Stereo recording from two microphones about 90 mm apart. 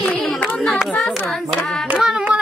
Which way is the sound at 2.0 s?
5° right (ahead or behind).